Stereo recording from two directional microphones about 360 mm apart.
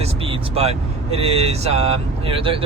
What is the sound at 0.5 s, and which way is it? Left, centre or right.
Speech, centre.